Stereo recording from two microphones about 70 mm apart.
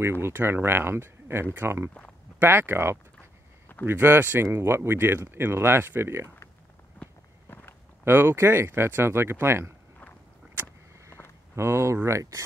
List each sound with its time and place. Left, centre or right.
0.0 s speech: right
7.0 s walk: left
8.0 s speech: right
11.1 s walk: left
11.5 s speech: right